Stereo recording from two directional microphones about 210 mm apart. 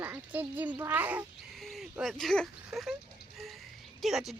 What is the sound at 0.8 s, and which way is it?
Speech, 10° right (ahead or behind).